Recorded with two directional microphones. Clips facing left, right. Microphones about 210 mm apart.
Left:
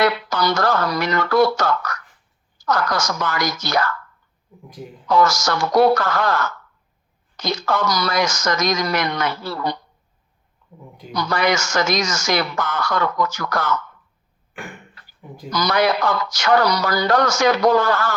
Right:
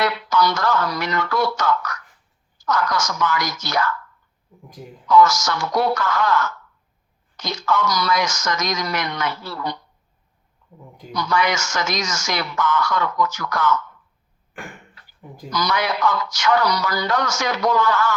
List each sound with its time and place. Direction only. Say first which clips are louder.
0.0 s speech: left 1 dB; 35° left (ahead or behind)
5.0 s speech: right 2 dB; 35° left (ahead or behind)
11.1 s speech: left 1 dB; 35° left (ahead or behind)
15.4 s speech: left 4 dB; 35° left (ahead or behind)